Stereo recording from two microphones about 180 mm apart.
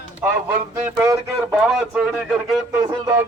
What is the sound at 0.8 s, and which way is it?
Speech, 15° right (ahead or behind).